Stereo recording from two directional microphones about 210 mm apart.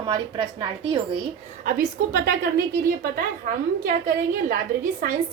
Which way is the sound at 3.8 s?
40° right (ahead or behind).